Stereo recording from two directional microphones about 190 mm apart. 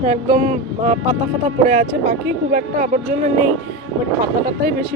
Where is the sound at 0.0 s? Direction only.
40° right (ahead or behind).